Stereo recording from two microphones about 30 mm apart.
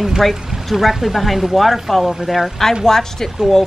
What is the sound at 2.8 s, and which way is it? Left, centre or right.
Speech, centre.